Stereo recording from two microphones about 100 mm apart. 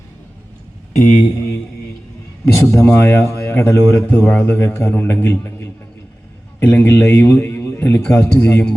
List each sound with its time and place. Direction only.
0.9 s a man's voice: 30° left (ahead or behind)
2.8 s a man's voice: 15° left (ahead or behind)